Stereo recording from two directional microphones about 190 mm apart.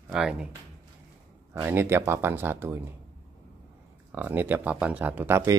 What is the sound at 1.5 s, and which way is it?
Speech, 10° right (ahead or behind).